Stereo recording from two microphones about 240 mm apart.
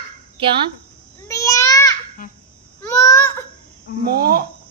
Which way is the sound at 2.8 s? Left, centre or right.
Centre.